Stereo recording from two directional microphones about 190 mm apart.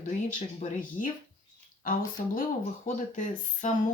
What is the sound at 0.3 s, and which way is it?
Speech, 45° left (ahead or behind).